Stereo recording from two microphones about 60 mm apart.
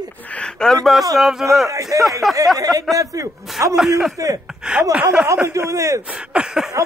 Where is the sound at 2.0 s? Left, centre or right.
Centre.